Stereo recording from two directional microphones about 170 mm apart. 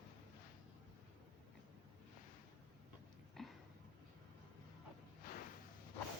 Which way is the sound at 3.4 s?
Centre (ahead or behind).